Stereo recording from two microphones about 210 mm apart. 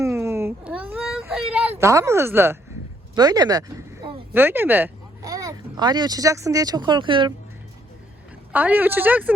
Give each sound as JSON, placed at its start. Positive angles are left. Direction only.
{"t": 0.0, "sound": "a sound", "side_deg": -15}
{"t": 1.8, "sound": "speech", "side_deg": -15}
{"t": 8.5, "sound": "speech", "side_deg": -10}